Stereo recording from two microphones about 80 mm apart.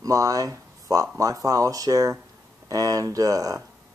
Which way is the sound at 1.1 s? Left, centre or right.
Right.